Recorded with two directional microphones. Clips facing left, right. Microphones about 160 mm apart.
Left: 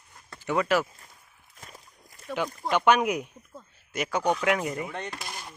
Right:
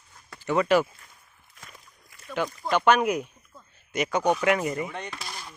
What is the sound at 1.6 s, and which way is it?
Walk, 35° left (ahead or behind).